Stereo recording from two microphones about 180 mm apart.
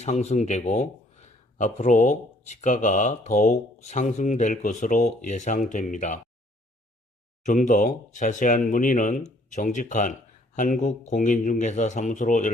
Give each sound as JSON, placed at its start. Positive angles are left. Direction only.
{"t": 0.0, "sound": "speech", "side_deg": 40}
{"t": 7.4, "sound": "speech", "side_deg": 45}